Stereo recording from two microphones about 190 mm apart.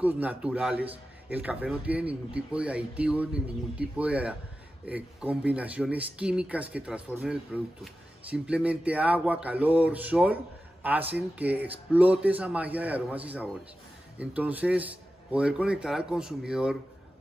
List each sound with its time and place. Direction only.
0.0 s speech: 10° right (ahead or behind)